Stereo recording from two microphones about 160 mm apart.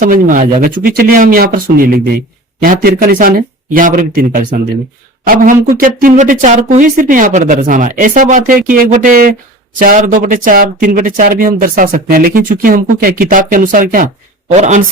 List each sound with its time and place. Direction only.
0.0 s speech: 55° right (ahead or behind)
14.5 s speech: 45° right (ahead or behind)